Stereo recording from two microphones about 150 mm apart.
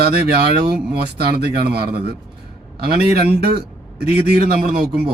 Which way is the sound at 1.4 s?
90° right.